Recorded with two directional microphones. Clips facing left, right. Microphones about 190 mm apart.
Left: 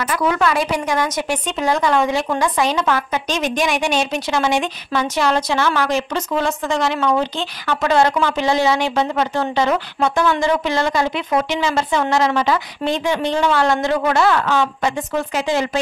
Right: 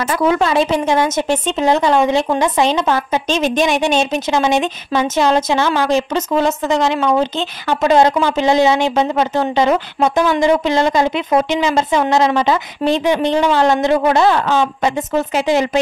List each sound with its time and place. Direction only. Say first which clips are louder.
0.0 s a woman's voice: right 3 dB; 25° right (ahead or behind)